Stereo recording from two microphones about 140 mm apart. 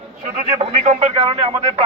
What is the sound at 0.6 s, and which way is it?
Speech, 50° right (ahead or behind).